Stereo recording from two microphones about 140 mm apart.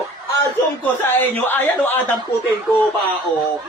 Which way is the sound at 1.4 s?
15° left (ahead or behind).